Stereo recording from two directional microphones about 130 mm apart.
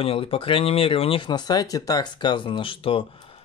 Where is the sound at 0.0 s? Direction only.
45° left (ahead or behind).